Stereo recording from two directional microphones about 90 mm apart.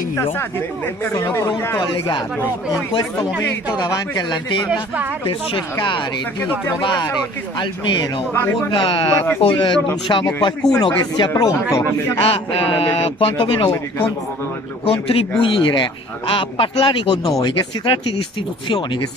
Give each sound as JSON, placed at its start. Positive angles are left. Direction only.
{"t": 0.1, "sound": "speech", "side_deg": 25}
{"t": 1.8, "sound": "speech", "side_deg": 60}
{"t": 3.7, "sound": "speech", "side_deg": 50}
{"t": 8.3, "sound": "speech", "side_deg": 25}
{"t": 8.6, "sound": "speech", "side_deg": 70}
{"t": 12.2, "sound": "a man's voice", "side_deg": 90}
{"t": 14.9, "sound": "speech", "side_deg": 90}
{"t": 17.4, "sound": "speech", "side_deg": 55}